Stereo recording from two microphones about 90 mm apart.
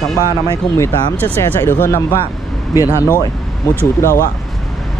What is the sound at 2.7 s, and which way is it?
Speech, 40° left (ahead or behind).